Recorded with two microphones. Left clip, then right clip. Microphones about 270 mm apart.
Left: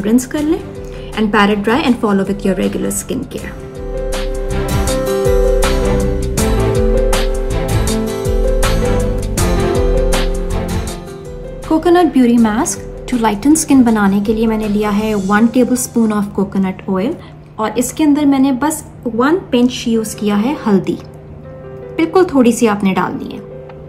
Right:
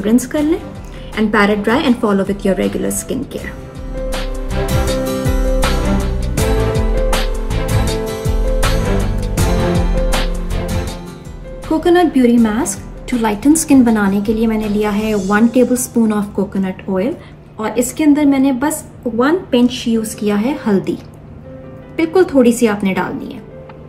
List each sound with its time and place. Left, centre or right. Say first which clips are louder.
0.0 s a woman's voice: even; centre
4.1 s music: left 2 dB; centre
11.7 s a woman's voice: left 1 dB; centre
21.9 s a woman's voice: even; centre